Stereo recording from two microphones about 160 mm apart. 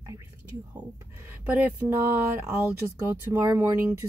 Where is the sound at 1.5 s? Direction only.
10° right (ahead or behind).